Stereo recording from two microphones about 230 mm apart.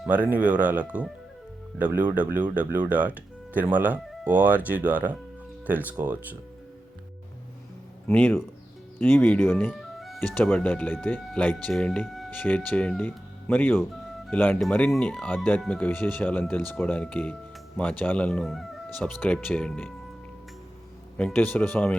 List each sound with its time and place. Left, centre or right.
0.0 s speech: centre
8.0 s speech: centre
21.2 s speech: centre